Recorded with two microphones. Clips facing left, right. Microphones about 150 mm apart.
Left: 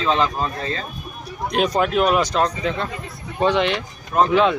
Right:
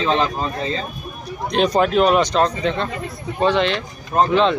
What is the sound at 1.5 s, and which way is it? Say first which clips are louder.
Speech: right 3 dB; 5° left (ahead or behind).